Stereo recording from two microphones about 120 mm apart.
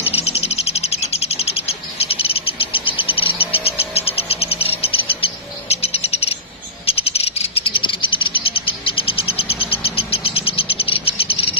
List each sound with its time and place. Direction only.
0.0 s bird: 60° left (ahead or behind)
3.9 s a sound: 55° left (ahead or behind)
5.2 s bird: 55° left (ahead or behind)
6.9 s cricket: 55° left (ahead or behind)